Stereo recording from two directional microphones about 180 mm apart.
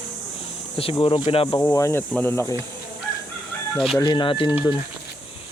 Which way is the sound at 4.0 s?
25° left (ahead or behind).